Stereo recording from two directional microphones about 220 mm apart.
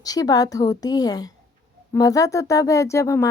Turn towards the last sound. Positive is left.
turn(degrees=15)  # may be behind; listen again after turning